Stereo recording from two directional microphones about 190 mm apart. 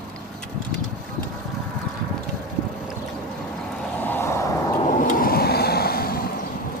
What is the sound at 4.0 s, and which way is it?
Vehicle, 10° left (ahead or behind).